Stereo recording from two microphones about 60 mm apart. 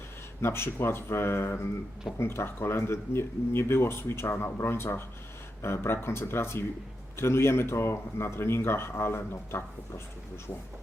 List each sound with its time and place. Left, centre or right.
0.4 s speech: left